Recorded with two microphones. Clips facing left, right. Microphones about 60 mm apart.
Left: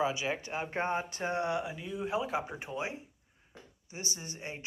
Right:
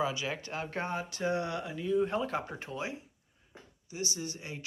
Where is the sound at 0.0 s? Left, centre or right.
Left.